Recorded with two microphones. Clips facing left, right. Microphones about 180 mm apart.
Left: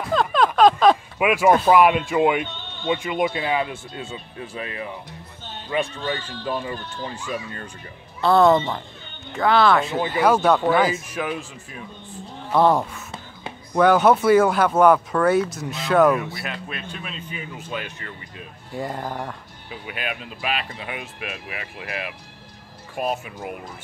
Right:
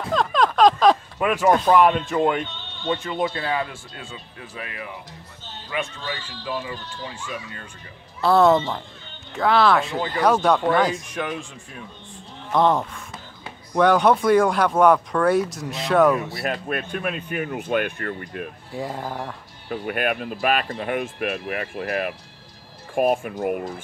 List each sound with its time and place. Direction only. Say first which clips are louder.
0.1 s a sound: left 1 dB; 5° left (ahead or behind)
0.6 s speech: left 1 dB; centre (ahead or behind); by 4.8 s 30° left (ahead or behind)
5.9 s speech: left 5 dB; 55° left (ahead or behind)
8.2 s speech: even; centre (ahead or behind)
16.4 s speech: right 6 dB; 50° right (ahead or behind)
18.7 s speech: left 2 dB; centre (ahead or behind)
19.7 s speech: right 7 dB; 50° right (ahead or behind)